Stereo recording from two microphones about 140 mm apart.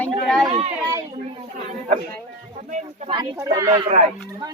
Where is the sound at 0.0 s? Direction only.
Centre (ahead or behind).